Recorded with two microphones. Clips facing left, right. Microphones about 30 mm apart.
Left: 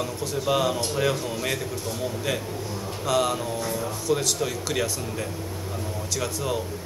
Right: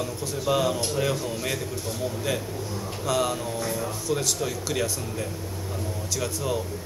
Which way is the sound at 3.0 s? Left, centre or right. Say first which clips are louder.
Left 2 dB; centre.